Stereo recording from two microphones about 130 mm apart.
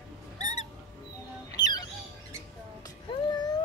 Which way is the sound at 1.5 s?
30° left (ahead or behind).